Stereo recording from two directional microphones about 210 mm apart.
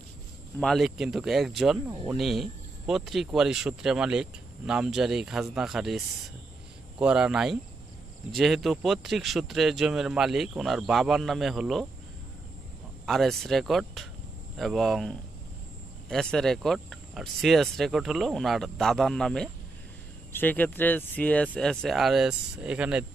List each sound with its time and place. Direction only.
0.6 s speech: centre (ahead or behind)
13.0 s speech: centre (ahead or behind)